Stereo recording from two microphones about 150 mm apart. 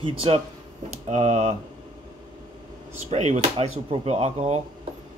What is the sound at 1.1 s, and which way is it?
Speech, 50° right (ahead or behind).